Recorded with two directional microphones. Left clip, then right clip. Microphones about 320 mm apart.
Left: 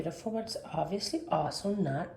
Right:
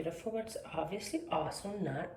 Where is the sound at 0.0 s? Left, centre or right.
Centre.